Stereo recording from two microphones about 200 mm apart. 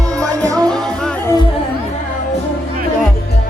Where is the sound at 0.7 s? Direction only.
5° left (ahead or behind).